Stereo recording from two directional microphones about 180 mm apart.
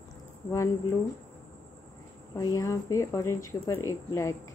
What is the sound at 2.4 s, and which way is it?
Speech, 15° left (ahead or behind).